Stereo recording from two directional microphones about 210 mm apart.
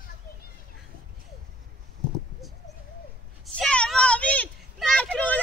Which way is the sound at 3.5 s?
5° left (ahead or behind).